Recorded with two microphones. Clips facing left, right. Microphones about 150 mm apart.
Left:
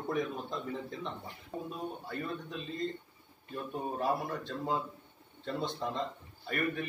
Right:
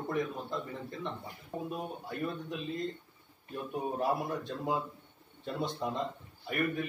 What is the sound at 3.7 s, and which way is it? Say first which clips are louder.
A man's voice: right 1 dB; 10° right (ahead or behind).